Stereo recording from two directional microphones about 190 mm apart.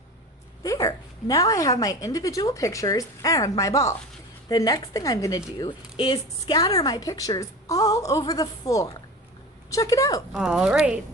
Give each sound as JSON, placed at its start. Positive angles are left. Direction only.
{"t": 0.6, "sound": "a woman's voice", "side_deg": 15}
{"t": 10.3, "sound": "speech", "side_deg": -5}